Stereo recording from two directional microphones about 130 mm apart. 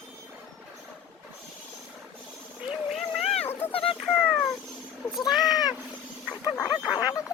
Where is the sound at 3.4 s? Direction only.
15° left (ahead or behind).